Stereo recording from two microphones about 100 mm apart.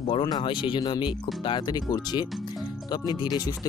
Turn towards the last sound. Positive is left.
turn(degrees=45)  # may be behind; listen again after turning